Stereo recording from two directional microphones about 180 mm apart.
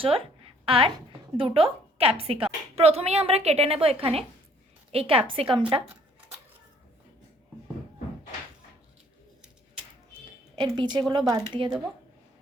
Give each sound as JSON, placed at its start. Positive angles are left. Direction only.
{"t": 0.0, "sound": "a woman's voice", "side_deg": -30}
{"t": 5.8, "sound": "a sound", "side_deg": 0}
{"t": 10.5, "sound": "a woman's voice", "side_deg": -25}